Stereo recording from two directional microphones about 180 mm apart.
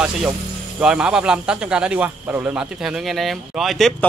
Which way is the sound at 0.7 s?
5° right (ahead or behind).